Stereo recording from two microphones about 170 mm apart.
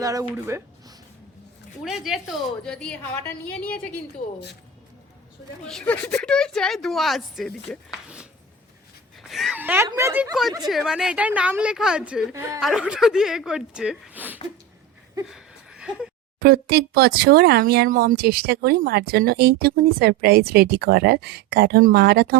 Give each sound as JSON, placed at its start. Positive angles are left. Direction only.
{"t": 0.0, "sound": "speech", "side_deg": -20}
{"t": 1.8, "sound": "a woman's voice", "side_deg": 0}
{"t": 5.6, "sound": "speech", "side_deg": 5}
{"t": 9.3, "sound": "a woman's voice", "side_deg": 0}
{"t": 10.7, "sound": "speech", "side_deg": 0}
{"t": 12.3, "sound": "a woman's voice", "side_deg": -15}
{"t": 12.5, "sound": "speech", "side_deg": -5}
{"t": 15.3, "sound": "a sound", "side_deg": -5}
{"t": 16.4, "sound": "speech", "side_deg": -65}